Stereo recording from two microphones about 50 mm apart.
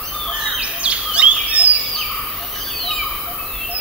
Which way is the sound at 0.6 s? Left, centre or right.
Right.